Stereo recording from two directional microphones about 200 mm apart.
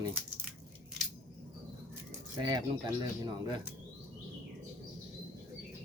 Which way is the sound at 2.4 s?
20° right (ahead or behind).